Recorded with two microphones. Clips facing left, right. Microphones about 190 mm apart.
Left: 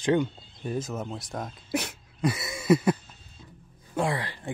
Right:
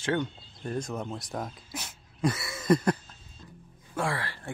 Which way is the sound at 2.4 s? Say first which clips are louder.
Left 3 dB; 20° left (ahead or behind).